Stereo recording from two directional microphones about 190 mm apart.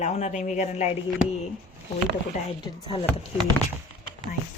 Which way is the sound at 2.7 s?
30° left (ahead or behind).